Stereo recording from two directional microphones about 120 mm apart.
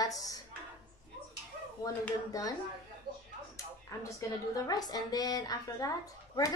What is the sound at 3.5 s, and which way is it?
Speech, 25° left (ahead or behind).